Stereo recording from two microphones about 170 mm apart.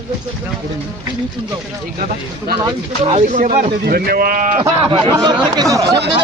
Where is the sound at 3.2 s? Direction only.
45° right (ahead or behind).